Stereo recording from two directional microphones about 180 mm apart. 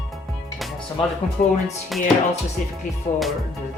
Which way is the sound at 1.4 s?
50° left (ahead or behind).